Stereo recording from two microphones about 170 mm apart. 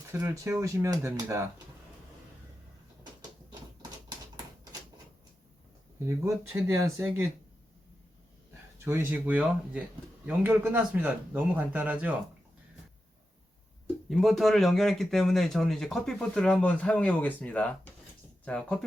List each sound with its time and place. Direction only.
0.1 s speech: 15° right (ahead or behind)
6.1 s speech: 15° right (ahead or behind)
9.0 s speech: 10° right (ahead or behind)
13.8 s speech: centre (ahead or behind)